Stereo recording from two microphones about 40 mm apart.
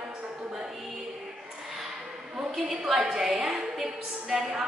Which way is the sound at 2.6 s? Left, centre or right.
Centre.